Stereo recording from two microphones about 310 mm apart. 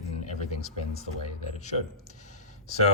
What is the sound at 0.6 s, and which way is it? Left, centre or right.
Speech, left.